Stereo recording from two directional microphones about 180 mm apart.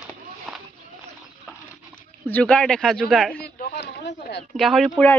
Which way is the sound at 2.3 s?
5° left (ahead or behind).